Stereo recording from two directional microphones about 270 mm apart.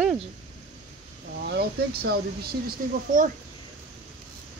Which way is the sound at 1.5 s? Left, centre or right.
Right.